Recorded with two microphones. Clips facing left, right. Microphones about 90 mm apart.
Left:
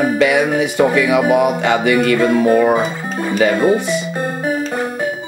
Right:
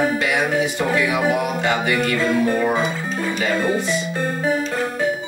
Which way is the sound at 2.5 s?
55° left (ahead or behind).